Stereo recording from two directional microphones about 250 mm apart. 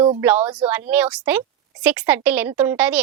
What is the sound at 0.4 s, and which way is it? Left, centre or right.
Speech, centre.